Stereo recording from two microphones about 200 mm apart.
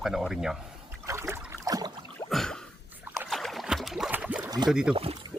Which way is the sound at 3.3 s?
Centre (ahead or behind).